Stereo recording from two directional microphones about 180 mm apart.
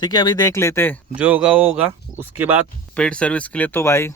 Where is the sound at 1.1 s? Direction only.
5° right (ahead or behind).